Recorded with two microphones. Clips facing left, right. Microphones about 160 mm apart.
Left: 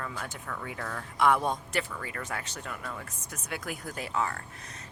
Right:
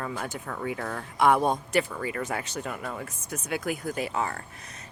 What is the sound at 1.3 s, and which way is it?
Speech, 45° right (ahead or behind).